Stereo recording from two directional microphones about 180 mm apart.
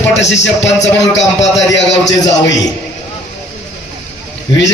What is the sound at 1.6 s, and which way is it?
Speech, 80° left.